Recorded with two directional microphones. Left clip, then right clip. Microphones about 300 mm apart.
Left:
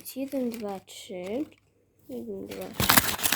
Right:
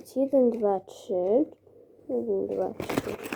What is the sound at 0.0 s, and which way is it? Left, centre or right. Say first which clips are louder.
Speech: right 9 dB; centre.